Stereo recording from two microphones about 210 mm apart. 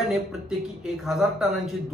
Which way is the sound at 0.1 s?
Centre (ahead or behind).